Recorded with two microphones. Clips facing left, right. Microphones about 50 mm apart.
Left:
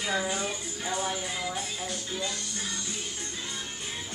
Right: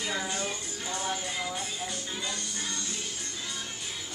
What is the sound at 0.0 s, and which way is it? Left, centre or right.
Music, centre.